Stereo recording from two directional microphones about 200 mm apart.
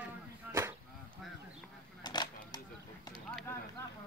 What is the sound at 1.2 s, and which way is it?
Duck, centre (ahead or behind).